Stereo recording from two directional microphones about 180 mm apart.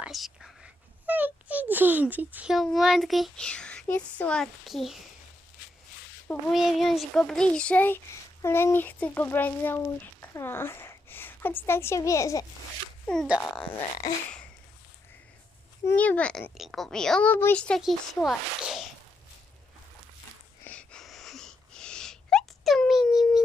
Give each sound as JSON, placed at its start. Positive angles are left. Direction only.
{"t": 0.0, "sound": "a child's voice", "side_deg": 0}
{"t": 6.5, "sound": "a child's voice", "side_deg": 0}
{"t": 13.1, "sound": "a child's voice", "side_deg": 5}
{"t": 14.0, "sound": "a child's voice", "side_deg": 20}
{"t": 15.9, "sound": "a child's voice", "side_deg": 10}
{"t": 20.7, "sound": "a sound", "side_deg": 5}